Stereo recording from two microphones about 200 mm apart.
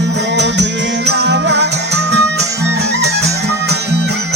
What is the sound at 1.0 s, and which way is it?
Music, 60° right (ahead or behind).